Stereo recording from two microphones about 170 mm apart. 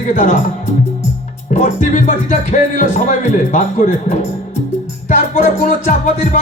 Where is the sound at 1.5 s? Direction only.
45° left (ahead or behind).